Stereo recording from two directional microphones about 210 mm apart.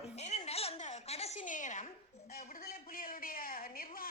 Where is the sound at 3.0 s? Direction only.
45° left (ahead or behind).